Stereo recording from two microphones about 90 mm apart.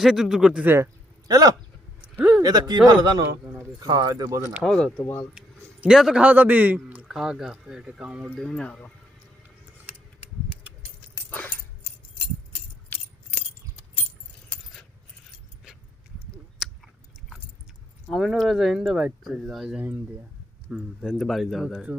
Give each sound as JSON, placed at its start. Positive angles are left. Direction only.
{"t": 0.0, "sound": "speech", "side_deg": -5}
{"t": 0.6, "sound": "speech", "side_deg": -25}
{"t": 1.3, "sound": "speech", "side_deg": -45}
{"t": 2.1, "sound": "a sound", "side_deg": -15}
{"t": 2.4, "sound": "speech", "side_deg": -50}
{"t": 4.6, "sound": "speech", "side_deg": 5}
{"t": 5.4, "sound": "speech", "side_deg": -10}
{"t": 7.1, "sound": "speech", "side_deg": -5}
{"t": 8.4, "sound": "speech", "side_deg": 5}
{"t": 11.3, "sound": "dog", "side_deg": 20}
{"t": 12.9, "sound": "keys jangling", "side_deg": 20}
{"t": 16.6, "sound": "chewing", "side_deg": 0}
{"t": 18.1, "sound": "a man's voice", "side_deg": 0}